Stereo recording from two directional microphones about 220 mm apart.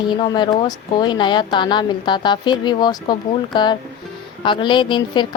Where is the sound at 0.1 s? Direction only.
20° left (ahead or behind).